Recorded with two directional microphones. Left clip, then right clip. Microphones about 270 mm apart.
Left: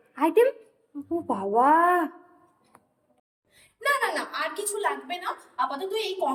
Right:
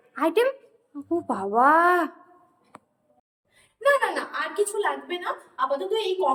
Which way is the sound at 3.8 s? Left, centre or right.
Centre.